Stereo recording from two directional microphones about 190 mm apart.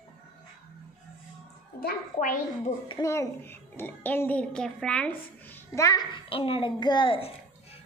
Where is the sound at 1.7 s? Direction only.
50° left (ahead or behind).